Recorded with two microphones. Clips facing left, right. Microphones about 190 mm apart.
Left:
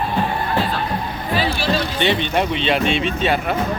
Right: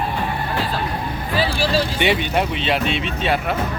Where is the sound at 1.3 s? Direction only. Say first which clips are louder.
Even; 40° right (ahead or behind).